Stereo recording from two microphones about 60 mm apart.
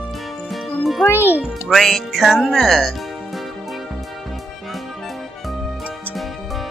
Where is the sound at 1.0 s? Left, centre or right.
Left.